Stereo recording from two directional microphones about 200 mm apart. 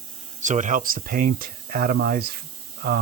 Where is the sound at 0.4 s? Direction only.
40° right (ahead or behind).